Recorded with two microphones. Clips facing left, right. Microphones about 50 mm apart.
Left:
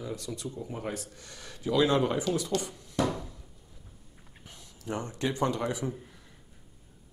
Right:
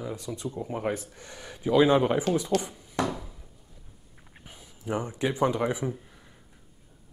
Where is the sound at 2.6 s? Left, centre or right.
Centre.